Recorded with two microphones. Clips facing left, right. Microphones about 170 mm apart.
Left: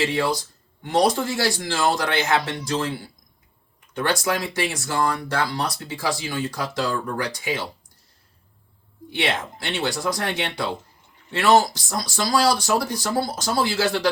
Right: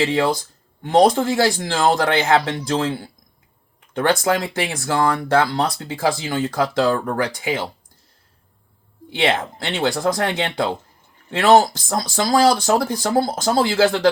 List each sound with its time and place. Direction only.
0.9 s speech: 55° right (ahead or behind)
9.2 s speech: 55° right (ahead or behind)